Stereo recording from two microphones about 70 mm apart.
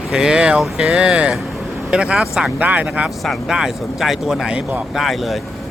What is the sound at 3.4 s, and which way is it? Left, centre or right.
Speech, centre.